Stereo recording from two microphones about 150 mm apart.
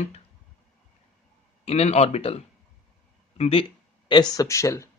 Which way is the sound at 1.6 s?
45° left (ahead or behind).